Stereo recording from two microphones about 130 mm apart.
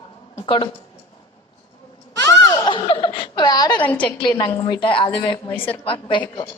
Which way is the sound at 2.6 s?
40° left (ahead or behind).